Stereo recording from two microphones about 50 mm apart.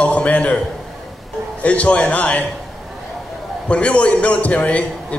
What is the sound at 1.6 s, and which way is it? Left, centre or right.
Speech, left.